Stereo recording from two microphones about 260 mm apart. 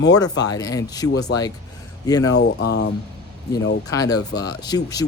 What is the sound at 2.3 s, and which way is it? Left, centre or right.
Speech, left.